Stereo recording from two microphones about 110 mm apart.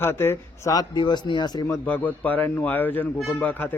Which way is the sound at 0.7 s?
35° left (ahead or behind).